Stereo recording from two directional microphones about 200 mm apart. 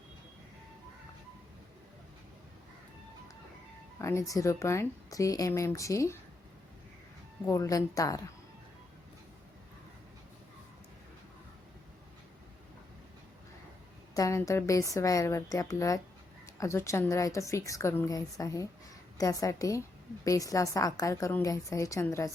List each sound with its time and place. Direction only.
3.9 s a woman's voice: 15° left (ahead or behind)
7.4 s a woman's voice: 15° left (ahead or behind)
14.1 s a woman's voice: 15° left (ahead or behind)